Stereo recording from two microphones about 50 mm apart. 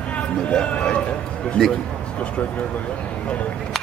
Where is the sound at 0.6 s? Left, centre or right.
Left.